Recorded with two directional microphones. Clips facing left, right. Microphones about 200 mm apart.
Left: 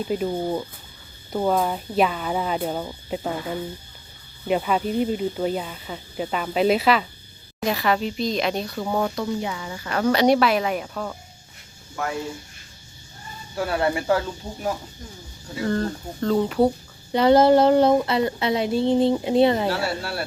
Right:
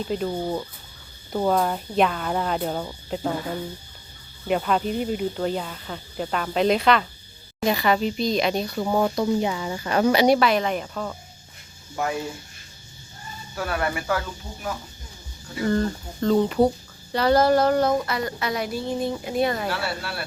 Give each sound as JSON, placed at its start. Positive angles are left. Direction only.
{"t": 0.0, "sound": "speech", "side_deg": 5}
{"t": 9.2, "sound": "speech", "side_deg": -25}
{"t": 10.1, "sound": "speech", "side_deg": -5}
{"t": 13.6, "sound": "a woman's voice", "side_deg": 25}
{"t": 15.6, "sound": "speech", "side_deg": 0}
{"t": 17.1, "sound": "a woman's voice", "side_deg": 20}